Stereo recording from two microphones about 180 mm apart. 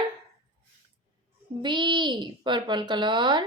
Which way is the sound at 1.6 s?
25° right (ahead or behind).